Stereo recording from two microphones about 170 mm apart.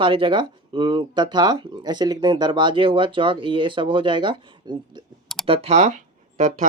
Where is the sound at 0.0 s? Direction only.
30° right (ahead or behind).